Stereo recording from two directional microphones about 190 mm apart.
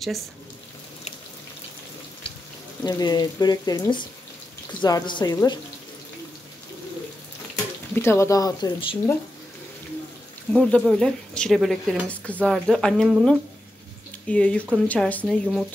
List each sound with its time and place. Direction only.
2.8 s speech: 20° left (ahead or behind)
7.9 s speech: 15° left (ahead or behind)
10.5 s speech: 5° left (ahead or behind)